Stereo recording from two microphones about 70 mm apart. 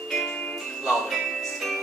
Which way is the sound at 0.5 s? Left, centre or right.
Centre.